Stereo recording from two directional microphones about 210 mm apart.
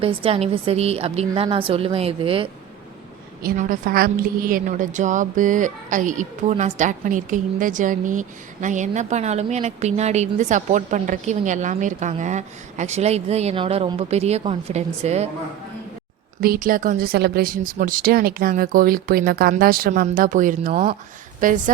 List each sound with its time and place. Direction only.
0.0 s a woman's voice: 25° right (ahead or behind)
3.4 s a woman's voice: 40° right (ahead or behind)
16.4 s a woman's voice: 45° right (ahead or behind)